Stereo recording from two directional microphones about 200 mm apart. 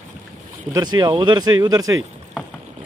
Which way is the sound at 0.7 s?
20° right (ahead or behind).